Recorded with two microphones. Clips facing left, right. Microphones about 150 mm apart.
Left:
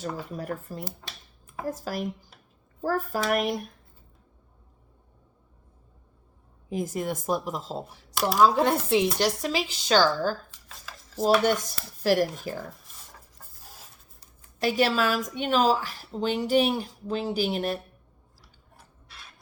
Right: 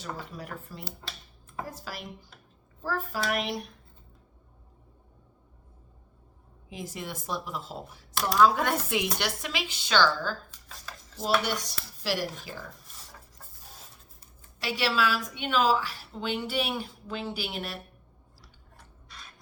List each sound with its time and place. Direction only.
0.0 s speech: 45° left (ahead or behind)
6.7 s speech: 45° left (ahead or behind)
8.1 s a sound: 5° left (ahead or behind)
8.4 s a woman's voice: 30° left (ahead or behind)
12.0 s speech: 50° left (ahead or behind)
14.6 s a woman's voice: 45° left (ahead or behind)